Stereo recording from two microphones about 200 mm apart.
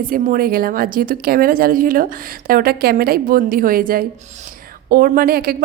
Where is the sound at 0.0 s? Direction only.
45° right (ahead or behind).